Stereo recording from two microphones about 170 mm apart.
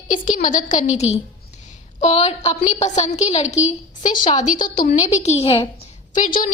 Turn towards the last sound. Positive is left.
turn(degrees=50)  # may be behind; listen again after turning